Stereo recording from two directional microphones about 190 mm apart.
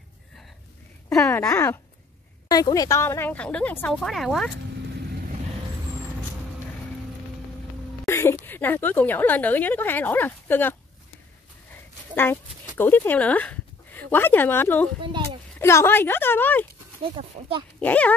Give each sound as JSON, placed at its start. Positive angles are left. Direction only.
{"t": 1.0, "sound": "a woman's voice", "side_deg": 5}
{"t": 8.1, "sound": "a woman's voice", "side_deg": 15}
{"t": 12.2, "sound": "speech", "side_deg": 10}
{"t": 15.0, "sound": "speech", "side_deg": -25}
{"t": 15.6, "sound": "a woman's voice", "side_deg": 15}
{"t": 17.0, "sound": "speech", "side_deg": -30}
{"t": 17.7, "sound": "a woman's voice", "side_deg": 5}